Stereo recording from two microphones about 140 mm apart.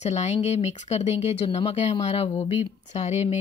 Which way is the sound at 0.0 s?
55° left (ahead or behind).